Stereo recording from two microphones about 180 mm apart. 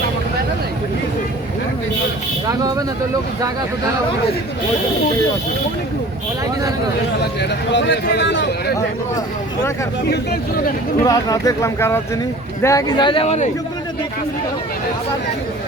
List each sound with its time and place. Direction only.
2.5 s vehicle: 20° right (ahead or behind)
7.7 s speech: 75° left (ahead or behind)
11.0 s speech: 20° left (ahead or behind); by 13.5 s 40° left (ahead or behind)